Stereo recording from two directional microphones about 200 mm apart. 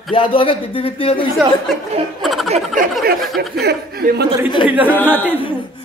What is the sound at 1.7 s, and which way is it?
Speech, centre (ahead or behind).